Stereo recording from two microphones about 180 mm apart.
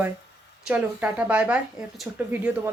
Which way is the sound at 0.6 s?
10° right (ahead or behind).